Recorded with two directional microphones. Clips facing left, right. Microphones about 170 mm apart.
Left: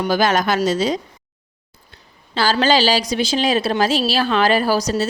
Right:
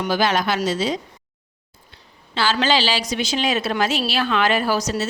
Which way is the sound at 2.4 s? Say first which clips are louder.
Left 4 dB; 40° left (ahead or behind).